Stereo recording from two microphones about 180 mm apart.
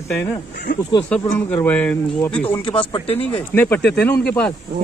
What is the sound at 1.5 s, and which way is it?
Speech, 10° left (ahead or behind).